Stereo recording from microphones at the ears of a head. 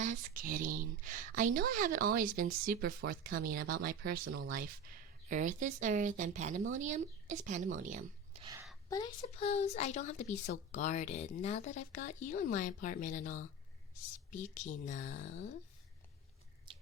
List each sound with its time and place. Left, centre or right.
0.0 s speech: right
8.9 s a woman's voice: left